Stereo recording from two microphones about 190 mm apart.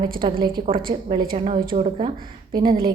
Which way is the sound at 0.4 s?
25° right (ahead or behind).